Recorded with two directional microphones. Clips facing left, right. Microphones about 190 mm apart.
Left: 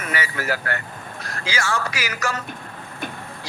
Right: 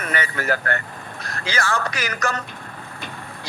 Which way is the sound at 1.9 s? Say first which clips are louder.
Right 1 dB; 10° left (ahead or behind).